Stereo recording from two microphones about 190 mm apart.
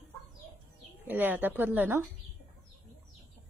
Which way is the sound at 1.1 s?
10° right (ahead or behind).